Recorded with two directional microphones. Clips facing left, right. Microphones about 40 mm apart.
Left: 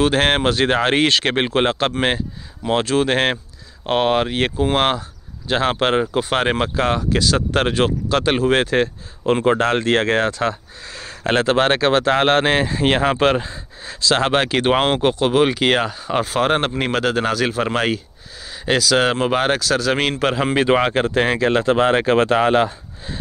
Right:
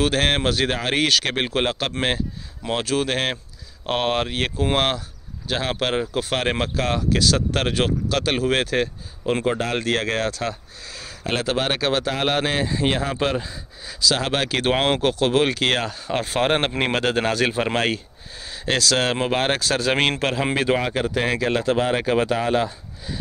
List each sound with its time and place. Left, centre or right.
0.0 s speech: centre
3.8 s speech: centre
5.5 s speech: left
6.1 s speech: centre
9.5 s speech: left
13.4 s speech: left
14.5 s speech: centre
16.3 s a man's voice: centre
19.6 s a man's voice: centre
20.2 s speech: centre
20.5 s speech: left
20.8 s speech: left
21.1 s speech: left